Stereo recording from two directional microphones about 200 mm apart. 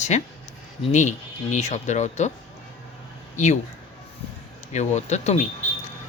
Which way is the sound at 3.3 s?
35° left (ahead or behind).